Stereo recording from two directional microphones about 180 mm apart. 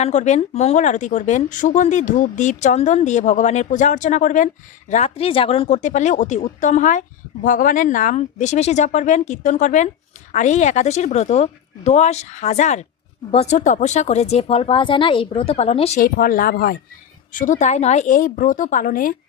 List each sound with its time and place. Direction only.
0.0 s speech: 40° left (ahead or behind)
16.0 s speech: 55° left (ahead or behind)